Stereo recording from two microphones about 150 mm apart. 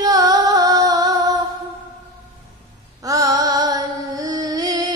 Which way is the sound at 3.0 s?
25° right (ahead or behind).